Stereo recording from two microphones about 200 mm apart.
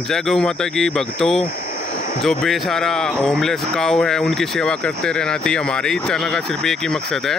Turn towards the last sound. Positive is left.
turn(degrees=0)  # may be behind; listen again after turning